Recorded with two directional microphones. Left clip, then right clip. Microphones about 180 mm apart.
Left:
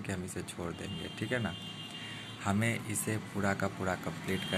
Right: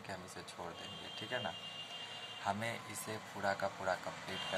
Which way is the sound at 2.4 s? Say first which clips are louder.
Left 5 dB; 10° left (ahead or behind).